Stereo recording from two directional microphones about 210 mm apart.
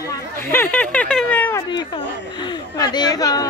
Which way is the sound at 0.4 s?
10° left (ahead or behind).